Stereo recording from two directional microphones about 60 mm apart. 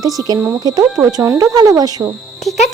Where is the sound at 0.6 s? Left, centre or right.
Right.